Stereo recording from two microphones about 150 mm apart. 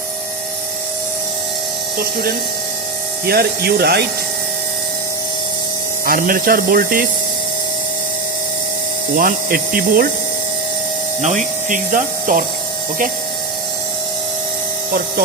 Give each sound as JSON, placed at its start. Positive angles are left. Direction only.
{"t": 3.2, "sound": "speech", "side_deg": -90}
{"t": 6.1, "sound": "speech", "side_deg": -70}
{"t": 9.1, "sound": "speech", "side_deg": -70}
{"t": 11.2, "sound": "speech", "side_deg": -50}